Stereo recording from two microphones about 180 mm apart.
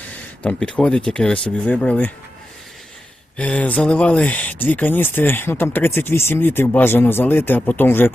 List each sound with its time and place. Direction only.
0.0 s speech: 10° left (ahead or behind)
3.3 s speech: 5° left (ahead or behind)